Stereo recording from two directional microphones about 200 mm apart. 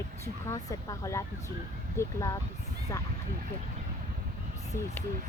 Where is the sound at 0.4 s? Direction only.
15° left (ahead or behind).